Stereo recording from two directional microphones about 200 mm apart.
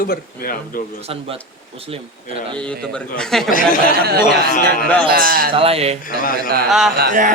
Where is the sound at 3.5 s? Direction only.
45° left (ahead or behind).